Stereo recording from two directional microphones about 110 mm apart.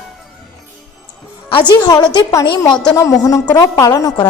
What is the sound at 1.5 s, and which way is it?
A woman's voice, 40° left (ahead or behind).